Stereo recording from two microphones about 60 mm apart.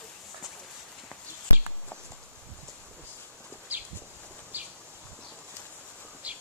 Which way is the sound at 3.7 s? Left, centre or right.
Right.